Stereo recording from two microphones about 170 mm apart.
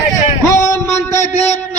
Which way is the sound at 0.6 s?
15° left (ahead or behind).